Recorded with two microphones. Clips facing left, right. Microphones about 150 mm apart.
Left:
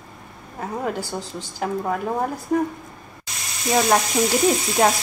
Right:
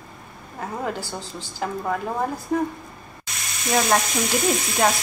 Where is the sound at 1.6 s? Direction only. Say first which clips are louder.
Left 2 dB; 10° left (ahead or behind).